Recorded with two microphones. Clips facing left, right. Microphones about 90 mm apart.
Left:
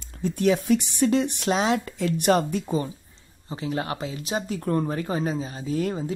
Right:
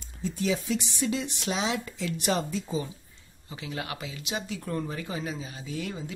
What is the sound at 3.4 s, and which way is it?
Speech, 35° left (ahead or behind).